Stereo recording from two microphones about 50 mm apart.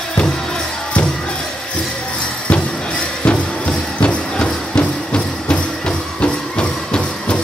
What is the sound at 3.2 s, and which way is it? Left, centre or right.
Music, left.